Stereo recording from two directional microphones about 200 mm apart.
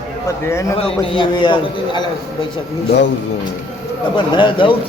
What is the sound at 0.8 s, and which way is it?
A man's voice, 25° left (ahead or behind).